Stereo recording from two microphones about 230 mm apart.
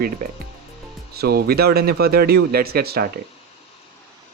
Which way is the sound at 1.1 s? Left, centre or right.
Right.